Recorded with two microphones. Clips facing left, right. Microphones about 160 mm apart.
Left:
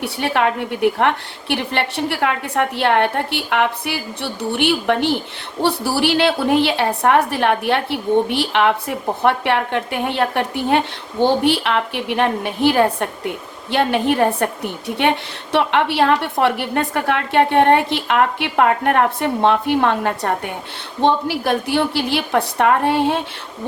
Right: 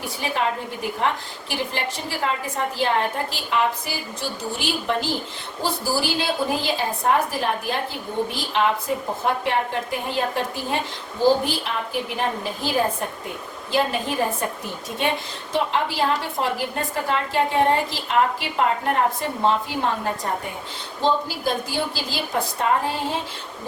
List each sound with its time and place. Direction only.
0.0 s a woman's voice: 70° left (ahead or behind)